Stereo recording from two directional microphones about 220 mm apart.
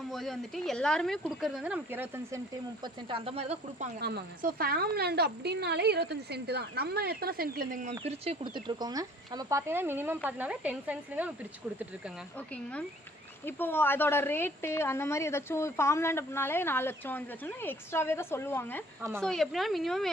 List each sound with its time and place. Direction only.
0.1 s speech: centre (ahead or behind)
2.8 s speech: 25° right (ahead or behind)
4.0 s a woman's voice: 45° right (ahead or behind)
8.0 s speech: 25° right (ahead or behind); by 11.3 s 5° right (ahead or behind)
13.4 s a woman's voice: 10° left (ahead or behind)